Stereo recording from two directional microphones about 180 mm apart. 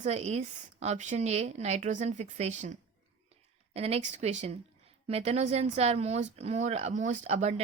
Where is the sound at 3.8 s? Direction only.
35° right (ahead or behind).